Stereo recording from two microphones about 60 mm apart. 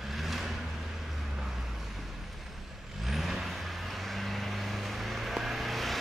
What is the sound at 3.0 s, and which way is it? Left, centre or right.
Vehicle, centre.